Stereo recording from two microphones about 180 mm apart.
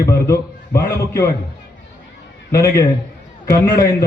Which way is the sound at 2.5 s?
15° left (ahead or behind).